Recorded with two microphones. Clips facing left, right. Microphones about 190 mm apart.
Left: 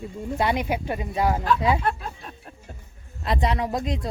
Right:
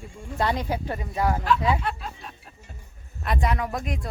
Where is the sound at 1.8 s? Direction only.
50° left (ahead or behind).